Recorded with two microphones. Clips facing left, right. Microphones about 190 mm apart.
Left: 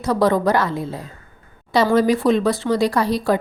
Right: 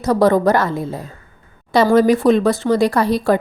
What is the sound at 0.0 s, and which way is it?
Speech, 45° right (ahead or behind).